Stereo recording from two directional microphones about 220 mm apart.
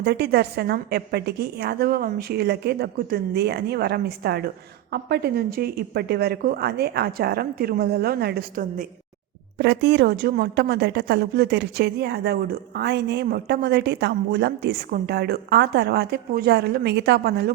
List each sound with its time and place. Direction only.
0.0 s a woman's voice: 50° right (ahead or behind)